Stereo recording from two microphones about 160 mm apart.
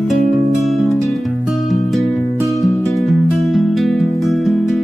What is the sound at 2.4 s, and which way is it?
Music, 20° left (ahead or behind).